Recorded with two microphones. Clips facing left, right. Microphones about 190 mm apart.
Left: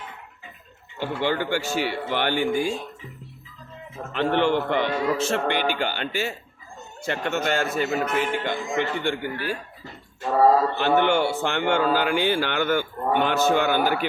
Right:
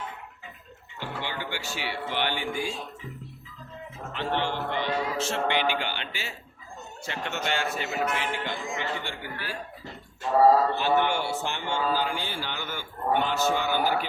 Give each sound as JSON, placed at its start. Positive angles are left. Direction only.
{"t": 0.9, "sound": "a man's voice", "side_deg": 50}
{"t": 4.1, "sound": "a man's voice", "side_deg": 60}
{"t": 10.8, "sound": "speech", "side_deg": 65}